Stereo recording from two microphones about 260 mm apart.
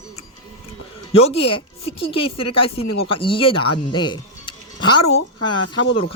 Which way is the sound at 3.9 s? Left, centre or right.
Centre.